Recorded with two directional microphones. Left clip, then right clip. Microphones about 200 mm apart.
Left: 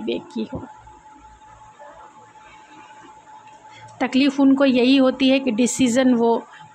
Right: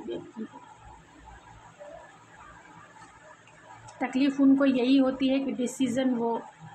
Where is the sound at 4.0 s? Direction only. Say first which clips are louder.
Left 7 dB; 45° left (ahead or behind).